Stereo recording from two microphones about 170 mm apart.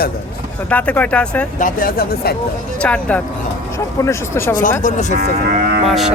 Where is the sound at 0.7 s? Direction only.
10° left (ahead or behind).